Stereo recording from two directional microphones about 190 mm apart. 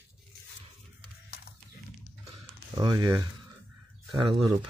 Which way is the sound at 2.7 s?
20° right (ahead or behind).